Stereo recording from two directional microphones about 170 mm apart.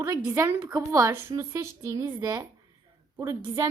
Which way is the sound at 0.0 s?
20° right (ahead or behind).